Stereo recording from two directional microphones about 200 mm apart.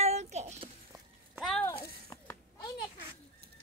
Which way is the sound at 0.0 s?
35° right (ahead or behind).